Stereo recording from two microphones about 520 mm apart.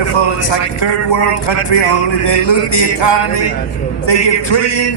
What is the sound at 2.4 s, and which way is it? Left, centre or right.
A man's voice, left.